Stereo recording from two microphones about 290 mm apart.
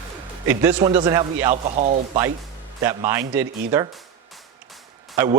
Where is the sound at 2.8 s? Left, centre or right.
Centre.